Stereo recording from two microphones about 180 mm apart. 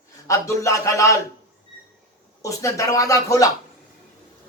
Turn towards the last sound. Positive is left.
turn(degrees=20)  # may be behind; listen again after turning